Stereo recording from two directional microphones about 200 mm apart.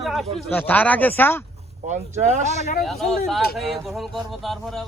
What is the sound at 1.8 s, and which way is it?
Speech, 35° right (ahead or behind).